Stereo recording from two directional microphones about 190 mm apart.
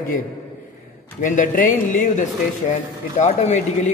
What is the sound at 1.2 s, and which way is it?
A man's voice, 45° left (ahead or behind).